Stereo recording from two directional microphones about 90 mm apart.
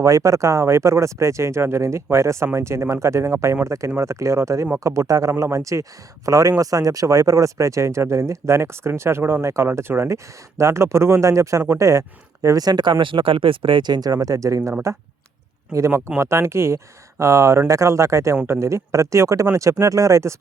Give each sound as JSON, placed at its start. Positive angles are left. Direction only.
{"t": 0.0, "sound": "speech", "side_deg": -35}